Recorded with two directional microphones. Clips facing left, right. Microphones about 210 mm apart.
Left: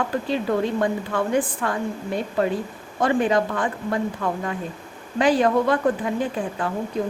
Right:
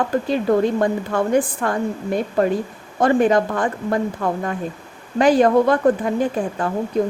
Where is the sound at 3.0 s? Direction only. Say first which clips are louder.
Right 4 dB; 45° right (ahead or behind).